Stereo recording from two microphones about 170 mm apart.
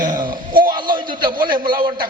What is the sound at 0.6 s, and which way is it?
Speech, 25° right (ahead or behind).